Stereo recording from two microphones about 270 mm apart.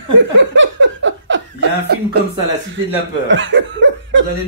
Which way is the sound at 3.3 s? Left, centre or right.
Right.